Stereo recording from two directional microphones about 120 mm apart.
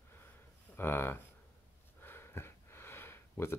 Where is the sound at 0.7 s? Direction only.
20° left (ahead or behind).